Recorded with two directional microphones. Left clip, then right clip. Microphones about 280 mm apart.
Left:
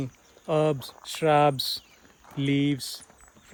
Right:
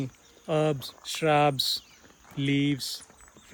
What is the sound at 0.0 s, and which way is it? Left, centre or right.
Speech, left.